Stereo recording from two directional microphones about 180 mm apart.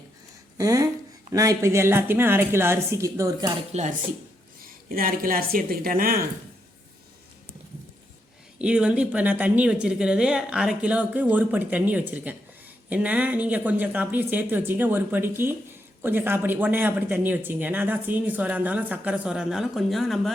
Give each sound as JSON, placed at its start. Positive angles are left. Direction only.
{"t": 0.5, "sound": "speech", "side_deg": -20}
{"t": 3.7, "sound": "speech", "side_deg": -40}
{"t": 4.6, "sound": "a woman's voice", "side_deg": -50}
{"t": 8.5, "sound": "speech", "side_deg": -5}